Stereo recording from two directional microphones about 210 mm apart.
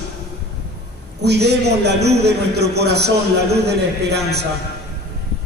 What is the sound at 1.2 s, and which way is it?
A man's voice, 50° right (ahead or behind).